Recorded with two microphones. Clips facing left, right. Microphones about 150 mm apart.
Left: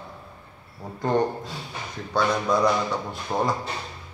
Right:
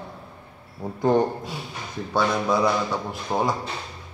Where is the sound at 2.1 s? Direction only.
5° right (ahead or behind).